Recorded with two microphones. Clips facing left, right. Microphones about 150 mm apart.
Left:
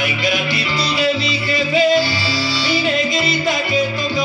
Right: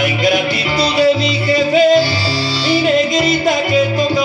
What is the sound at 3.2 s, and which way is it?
Music, 45° right (ahead or behind).